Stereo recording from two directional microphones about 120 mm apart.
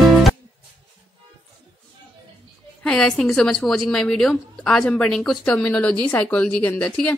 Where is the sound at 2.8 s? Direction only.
5° left (ahead or behind).